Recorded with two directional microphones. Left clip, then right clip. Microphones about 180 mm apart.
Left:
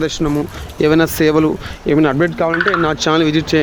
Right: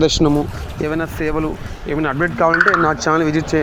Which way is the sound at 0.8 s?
60° left (ahead or behind).